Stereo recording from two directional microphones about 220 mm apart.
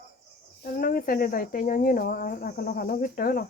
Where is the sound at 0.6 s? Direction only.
40° left (ahead or behind).